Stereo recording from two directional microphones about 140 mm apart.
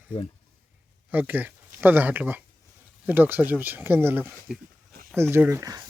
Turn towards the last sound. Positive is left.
turn(degrees=-25)  # may be behind; listen again after turning